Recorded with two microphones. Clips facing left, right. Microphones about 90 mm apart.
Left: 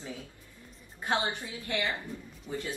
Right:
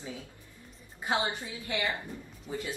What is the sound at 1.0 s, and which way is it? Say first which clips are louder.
Speech: even; 15° right (ahead or behind).